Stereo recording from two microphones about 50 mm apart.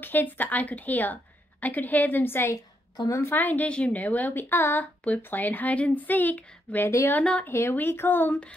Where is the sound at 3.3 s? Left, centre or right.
Left.